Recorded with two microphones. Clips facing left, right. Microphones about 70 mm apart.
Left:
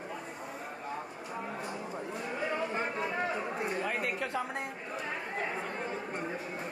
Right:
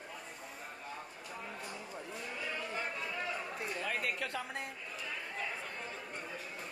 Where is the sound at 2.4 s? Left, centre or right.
Left.